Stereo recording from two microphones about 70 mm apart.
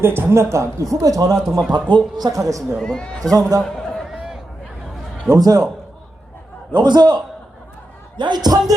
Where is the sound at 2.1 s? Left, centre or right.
Right.